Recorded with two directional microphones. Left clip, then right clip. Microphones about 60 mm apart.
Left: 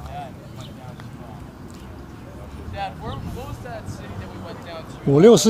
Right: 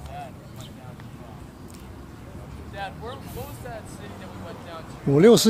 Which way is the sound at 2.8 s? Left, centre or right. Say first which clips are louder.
Left 4 dB; centre.